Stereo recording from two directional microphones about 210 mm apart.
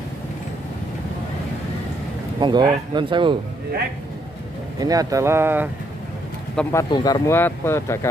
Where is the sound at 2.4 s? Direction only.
20° right (ahead or behind).